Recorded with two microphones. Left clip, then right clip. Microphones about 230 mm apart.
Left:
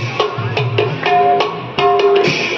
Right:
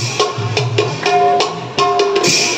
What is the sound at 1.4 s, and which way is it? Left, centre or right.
Music, right.